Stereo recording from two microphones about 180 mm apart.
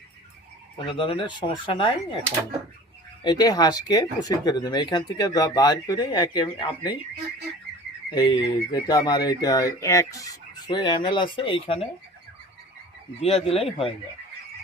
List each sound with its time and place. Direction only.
0.9 s speech: 30° left (ahead or behind)
3.2 s speech: 20° left (ahead or behind)
8.1 s speech: 25° left (ahead or behind)
13.2 s speech: 35° left (ahead or behind)